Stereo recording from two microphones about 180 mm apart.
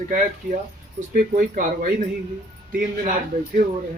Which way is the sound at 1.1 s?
50° right (ahead or behind).